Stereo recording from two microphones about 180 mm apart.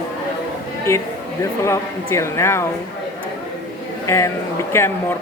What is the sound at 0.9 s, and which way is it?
A woman's voice, 15° left (ahead or behind).